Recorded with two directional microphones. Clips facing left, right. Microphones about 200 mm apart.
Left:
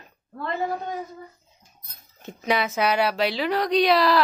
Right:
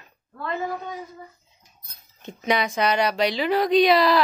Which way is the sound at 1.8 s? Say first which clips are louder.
Left 2 dB; 50° left (ahead or behind).